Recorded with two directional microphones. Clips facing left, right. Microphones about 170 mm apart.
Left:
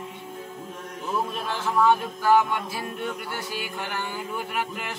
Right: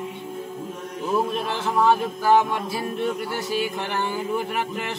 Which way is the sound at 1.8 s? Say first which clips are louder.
Right 1 dB; 30° right (ahead or behind).